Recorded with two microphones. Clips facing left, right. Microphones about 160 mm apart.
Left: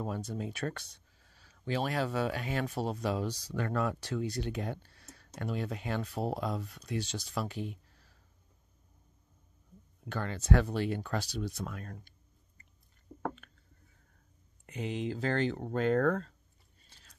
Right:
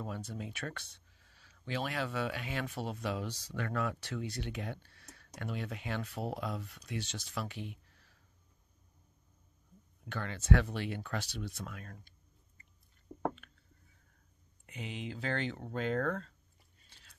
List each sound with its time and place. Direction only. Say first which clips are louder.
0.0 s speech: left 5 dB; 40° left (ahead or behind)
10.0 s speech: left 1 dB; 40° left (ahead or behind)
13.1 s a sound: right 1 dB; 15° right (ahead or behind)
14.7 s speech: left 7 dB; 45° left (ahead or behind)